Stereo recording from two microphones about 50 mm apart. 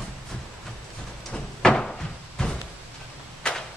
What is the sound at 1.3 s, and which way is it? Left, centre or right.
Door, centre.